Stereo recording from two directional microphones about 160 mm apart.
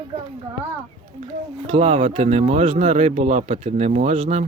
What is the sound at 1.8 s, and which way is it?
Speech, 45° right (ahead or behind).